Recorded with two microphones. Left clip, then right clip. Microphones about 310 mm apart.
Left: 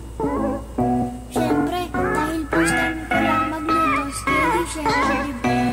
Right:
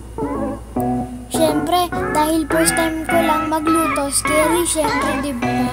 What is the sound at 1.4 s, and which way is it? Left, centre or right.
A child's voice, right.